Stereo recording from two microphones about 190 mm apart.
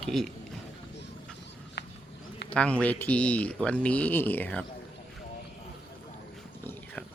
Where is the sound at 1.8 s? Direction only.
65° left (ahead or behind).